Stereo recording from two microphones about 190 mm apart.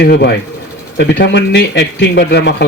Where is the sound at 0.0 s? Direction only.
60° left (ahead or behind).